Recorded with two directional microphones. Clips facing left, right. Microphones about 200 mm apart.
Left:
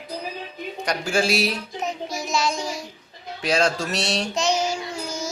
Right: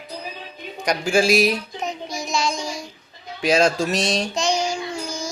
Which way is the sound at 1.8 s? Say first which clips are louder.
Even; 5° left (ahead or behind).